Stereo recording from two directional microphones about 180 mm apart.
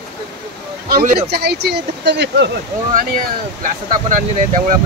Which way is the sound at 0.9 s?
55° right (ahead or behind).